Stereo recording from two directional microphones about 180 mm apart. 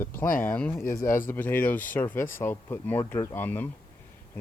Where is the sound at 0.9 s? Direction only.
50° left (ahead or behind).